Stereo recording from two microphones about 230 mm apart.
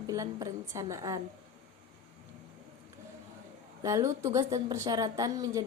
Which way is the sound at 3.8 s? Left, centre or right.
Centre.